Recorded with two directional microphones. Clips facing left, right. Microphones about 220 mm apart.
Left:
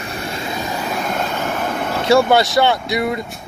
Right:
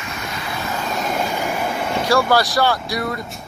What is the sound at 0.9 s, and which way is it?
Vehicle, 10° right (ahead or behind).